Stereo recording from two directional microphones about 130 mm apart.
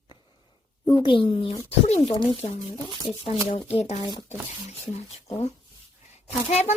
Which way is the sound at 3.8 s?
55° left (ahead or behind).